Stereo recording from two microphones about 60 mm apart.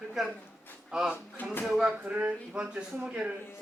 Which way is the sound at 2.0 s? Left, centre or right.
Right.